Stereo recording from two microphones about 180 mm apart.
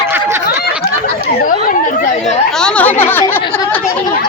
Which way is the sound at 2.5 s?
5° left (ahead or behind).